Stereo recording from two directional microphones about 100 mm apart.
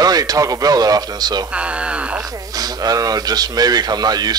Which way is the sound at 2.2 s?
35° right (ahead or behind).